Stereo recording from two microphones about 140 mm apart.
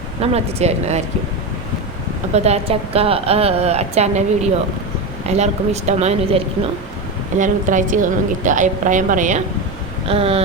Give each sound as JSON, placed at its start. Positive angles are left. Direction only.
{"t": 0.2, "sound": "a woman's voice", "side_deg": -50}
{"t": 2.3, "sound": "a woman's voice", "side_deg": -50}
{"t": 5.4, "sound": "a woman's voice", "side_deg": -50}
{"t": 7.3, "sound": "a woman's voice", "side_deg": -65}
{"t": 10.1, "sound": "a woman's voice", "side_deg": -45}